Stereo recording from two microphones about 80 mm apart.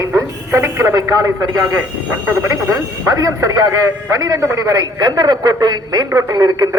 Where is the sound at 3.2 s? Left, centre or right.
Right.